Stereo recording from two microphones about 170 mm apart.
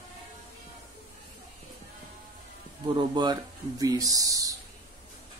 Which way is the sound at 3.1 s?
25° right (ahead or behind).